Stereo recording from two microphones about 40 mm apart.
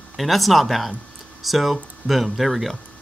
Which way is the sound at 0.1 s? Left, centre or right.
Centre.